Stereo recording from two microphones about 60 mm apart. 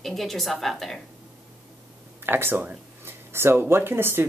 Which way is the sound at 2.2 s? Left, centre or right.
Right.